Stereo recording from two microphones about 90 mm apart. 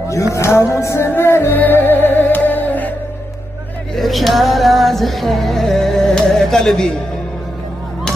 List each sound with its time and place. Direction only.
0.3 s music: 30° left (ahead or behind)
3.9 s music: centre (ahead or behind)